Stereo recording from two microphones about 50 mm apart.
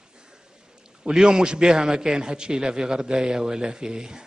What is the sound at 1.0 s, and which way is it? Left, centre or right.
A man's voice, centre.